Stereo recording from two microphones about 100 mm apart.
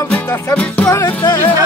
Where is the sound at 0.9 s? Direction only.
30° left (ahead or behind).